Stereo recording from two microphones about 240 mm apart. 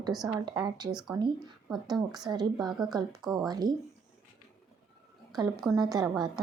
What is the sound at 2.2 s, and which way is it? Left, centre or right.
Speech, centre.